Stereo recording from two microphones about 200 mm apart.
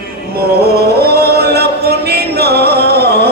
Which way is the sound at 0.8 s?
50° right (ahead or behind).